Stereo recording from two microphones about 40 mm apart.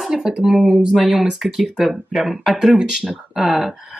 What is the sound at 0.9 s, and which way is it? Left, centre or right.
Speech, centre.